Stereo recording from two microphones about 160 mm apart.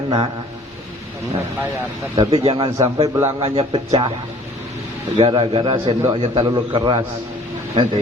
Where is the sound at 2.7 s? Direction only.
20° right (ahead or behind).